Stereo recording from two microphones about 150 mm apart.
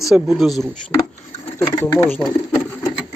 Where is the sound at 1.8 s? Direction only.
20° left (ahead or behind).